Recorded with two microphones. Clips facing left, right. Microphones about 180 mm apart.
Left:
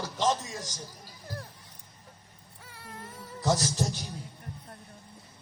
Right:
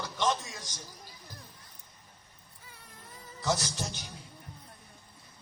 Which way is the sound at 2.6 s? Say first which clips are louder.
Left 9 dB; 75° left (ahead or behind).